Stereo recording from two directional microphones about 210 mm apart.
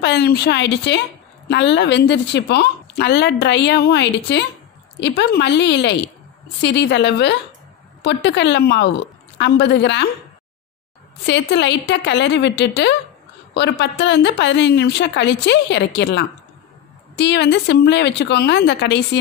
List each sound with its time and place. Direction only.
0.0 s a woman's voice: 50° left (ahead or behind)
11.2 s a woman's voice: 55° left (ahead or behind)